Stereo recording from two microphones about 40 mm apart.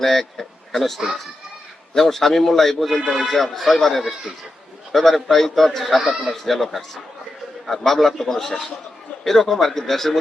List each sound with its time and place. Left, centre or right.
0.0 s a man's voice: centre
0.7 s a man's voice: centre
2.0 s a man's voice: centre